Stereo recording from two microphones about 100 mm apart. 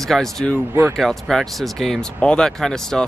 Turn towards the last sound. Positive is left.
turn(degrees=5)  # may be behind; listen again after turning